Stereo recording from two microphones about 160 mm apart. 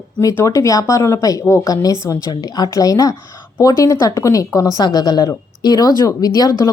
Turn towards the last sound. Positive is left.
turn(degrees=25)  # may be behind; listen again after turning